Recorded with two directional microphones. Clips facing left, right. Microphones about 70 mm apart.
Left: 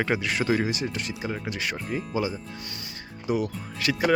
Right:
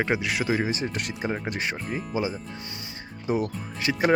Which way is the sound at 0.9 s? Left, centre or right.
Right.